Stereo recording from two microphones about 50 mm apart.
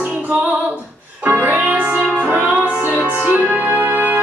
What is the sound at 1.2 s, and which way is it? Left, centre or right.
Music, right.